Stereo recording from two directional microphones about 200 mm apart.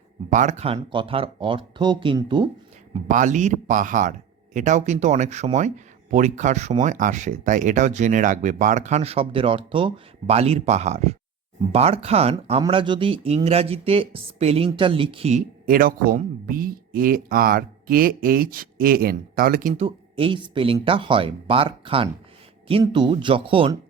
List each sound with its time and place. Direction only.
0.3 s speech: 35° right (ahead or behind)
2.9 s speech: 40° right (ahead or behind)